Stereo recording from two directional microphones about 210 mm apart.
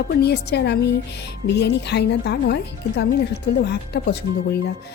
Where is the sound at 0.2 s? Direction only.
50° left (ahead or behind).